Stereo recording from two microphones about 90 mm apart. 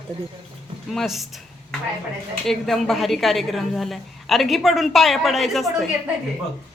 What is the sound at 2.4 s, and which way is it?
A woman's voice, 5° left (ahead or behind).